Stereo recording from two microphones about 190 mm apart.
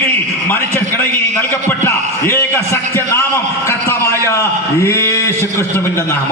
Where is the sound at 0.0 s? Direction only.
10° left (ahead or behind).